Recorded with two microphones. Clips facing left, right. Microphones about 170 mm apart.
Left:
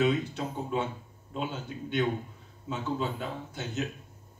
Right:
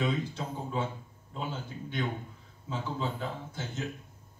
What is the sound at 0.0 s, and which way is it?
A man's voice, 70° left (ahead or behind).